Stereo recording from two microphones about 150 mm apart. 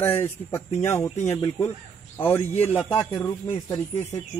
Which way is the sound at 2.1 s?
15° left (ahead or behind).